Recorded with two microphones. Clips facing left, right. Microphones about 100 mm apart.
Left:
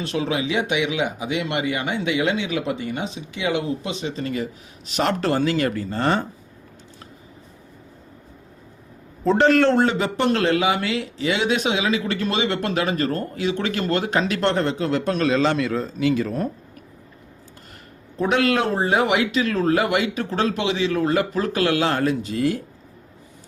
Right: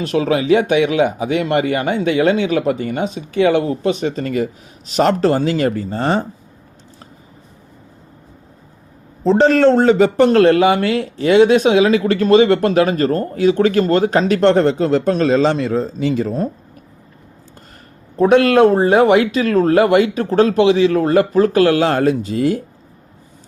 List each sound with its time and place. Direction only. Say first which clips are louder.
0.1 s speech: right 10 dB; 40° right (ahead or behind)
9.2 s a man's voice: right 5 dB; 30° right (ahead or behind)
18.2 s speech: right 9 dB; 40° right (ahead or behind)